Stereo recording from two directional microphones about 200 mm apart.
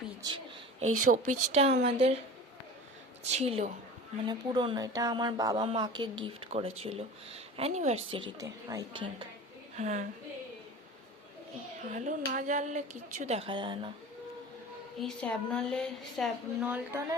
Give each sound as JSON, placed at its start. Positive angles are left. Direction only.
{"t": 0.2, "sound": "a woman's voice", "side_deg": -20}
{"t": 1.0, "sound": "speech", "side_deg": -40}
{"t": 3.2, "sound": "speech", "side_deg": -30}
{"t": 9.7, "sound": "speech", "side_deg": -35}
{"t": 11.9, "sound": "speech", "side_deg": -40}
{"t": 14.9, "sound": "a woman's voice", "side_deg": 5}